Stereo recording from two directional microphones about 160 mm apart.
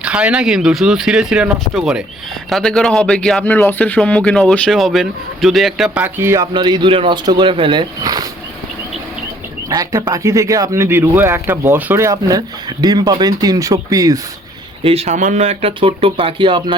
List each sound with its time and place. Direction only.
0.0 s speech: 5° right (ahead or behind)
6.5 s speech: 25° right (ahead or behind)
9.6 s speech: 25° right (ahead or behind)
14.8 s speech: 45° right (ahead or behind)